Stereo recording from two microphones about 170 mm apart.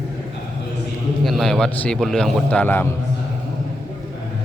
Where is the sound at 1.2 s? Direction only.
Centre (ahead or behind).